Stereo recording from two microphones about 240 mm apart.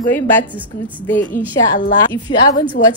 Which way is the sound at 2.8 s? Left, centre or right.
Left.